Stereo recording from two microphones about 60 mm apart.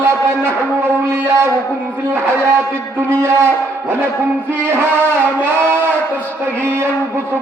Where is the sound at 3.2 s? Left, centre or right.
Right.